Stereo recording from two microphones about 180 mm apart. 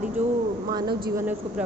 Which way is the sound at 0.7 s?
25° right (ahead or behind).